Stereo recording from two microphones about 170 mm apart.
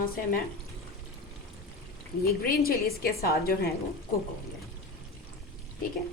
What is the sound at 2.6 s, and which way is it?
Speech, 65° left (ahead or behind).